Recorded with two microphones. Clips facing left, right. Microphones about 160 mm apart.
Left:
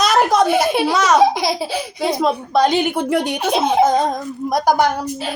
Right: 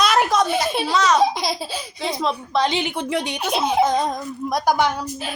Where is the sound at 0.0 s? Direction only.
45° left (ahead or behind).